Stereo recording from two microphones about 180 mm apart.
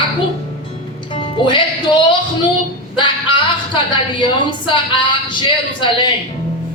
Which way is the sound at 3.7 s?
25° left (ahead or behind).